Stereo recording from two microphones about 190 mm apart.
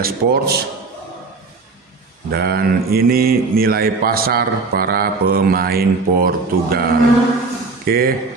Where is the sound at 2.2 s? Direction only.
55° right (ahead or behind).